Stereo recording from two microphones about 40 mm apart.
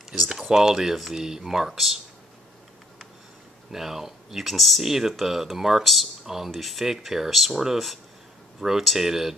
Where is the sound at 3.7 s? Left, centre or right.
Centre.